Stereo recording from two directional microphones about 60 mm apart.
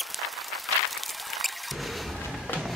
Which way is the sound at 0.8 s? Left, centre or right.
Centre.